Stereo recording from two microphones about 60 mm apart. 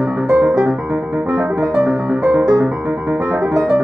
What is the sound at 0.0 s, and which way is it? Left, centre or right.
Music, right.